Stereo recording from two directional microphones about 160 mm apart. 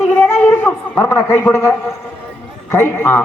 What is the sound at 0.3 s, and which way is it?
Speech, 15° left (ahead or behind).